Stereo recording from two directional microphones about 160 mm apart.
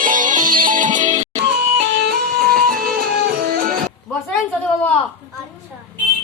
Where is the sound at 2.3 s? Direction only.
70° right (ahead or behind).